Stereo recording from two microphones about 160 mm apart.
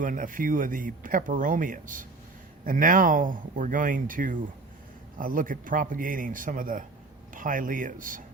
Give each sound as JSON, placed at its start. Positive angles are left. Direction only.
{"t": 0.0, "sound": "speech", "side_deg": -60}